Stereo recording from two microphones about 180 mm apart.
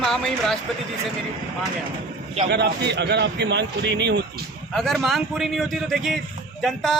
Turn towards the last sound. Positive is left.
turn(degrees=0)  # may be behind; listen again after turning